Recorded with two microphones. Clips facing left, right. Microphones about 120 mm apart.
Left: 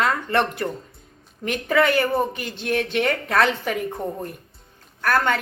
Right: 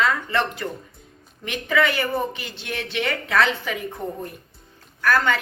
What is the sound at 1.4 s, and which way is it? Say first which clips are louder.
A woman's voice: left 2 dB; 45° left (ahead or behind).